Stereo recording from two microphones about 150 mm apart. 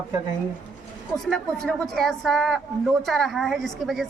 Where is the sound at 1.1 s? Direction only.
5° left (ahead or behind).